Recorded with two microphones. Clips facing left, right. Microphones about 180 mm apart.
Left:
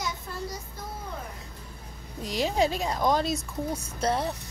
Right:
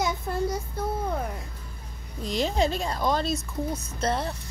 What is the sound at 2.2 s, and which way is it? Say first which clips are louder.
Speech: even; 10° left (ahead or behind).